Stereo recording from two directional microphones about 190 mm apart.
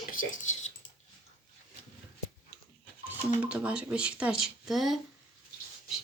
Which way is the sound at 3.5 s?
5° right (ahead or behind).